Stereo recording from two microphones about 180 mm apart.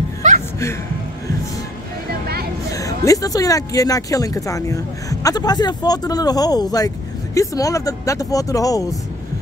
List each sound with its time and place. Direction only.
0.2 s music: 40° right (ahead or behind)
2.7 s speech: 20° left (ahead or behind)